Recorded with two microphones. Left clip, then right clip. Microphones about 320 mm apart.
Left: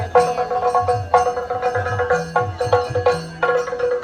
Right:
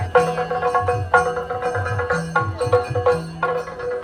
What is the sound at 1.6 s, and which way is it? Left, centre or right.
Music, right.